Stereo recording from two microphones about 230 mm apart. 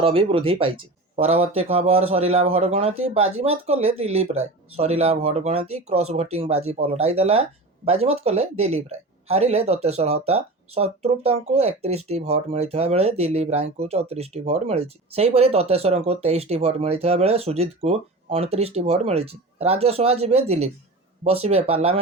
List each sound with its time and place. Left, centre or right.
0.0 s speech: right